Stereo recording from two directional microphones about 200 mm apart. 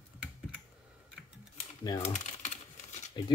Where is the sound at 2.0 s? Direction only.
35° left (ahead or behind).